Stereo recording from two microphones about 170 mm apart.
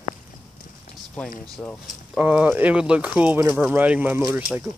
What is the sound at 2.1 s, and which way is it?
Speech, 5° right (ahead or behind).